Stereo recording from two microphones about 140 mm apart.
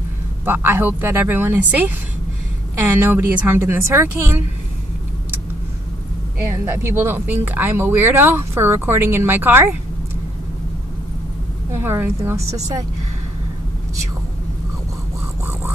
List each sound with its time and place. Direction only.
0.5 s speech: 15° right (ahead or behind)
6.5 s speech: 20° right (ahead or behind)
11.7 s speech: 15° right (ahead or behind)